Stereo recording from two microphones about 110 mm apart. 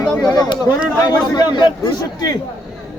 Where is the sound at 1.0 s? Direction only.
40° left (ahead or behind).